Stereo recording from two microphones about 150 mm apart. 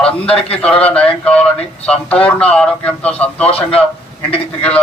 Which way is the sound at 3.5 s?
40° left (ahead or behind).